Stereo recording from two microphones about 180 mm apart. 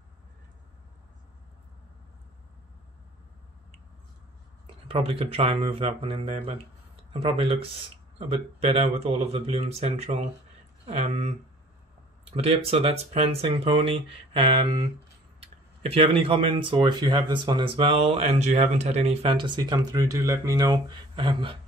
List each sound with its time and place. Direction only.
4.6 s speech: 30° right (ahead or behind)
8.8 s speech: 35° right (ahead or behind)